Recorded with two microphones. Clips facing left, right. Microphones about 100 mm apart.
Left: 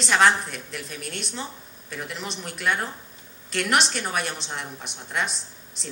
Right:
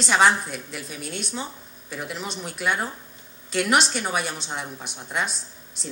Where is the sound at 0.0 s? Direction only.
5° right (ahead or behind).